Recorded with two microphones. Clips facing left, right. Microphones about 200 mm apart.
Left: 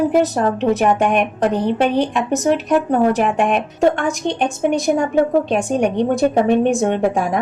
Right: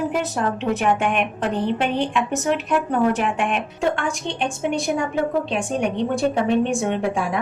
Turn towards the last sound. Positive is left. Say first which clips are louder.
# left 5 dB
turn(degrees=45)  # may be behind; listen again after turning